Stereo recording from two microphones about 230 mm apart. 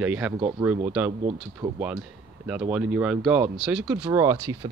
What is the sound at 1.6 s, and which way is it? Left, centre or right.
Speech, centre.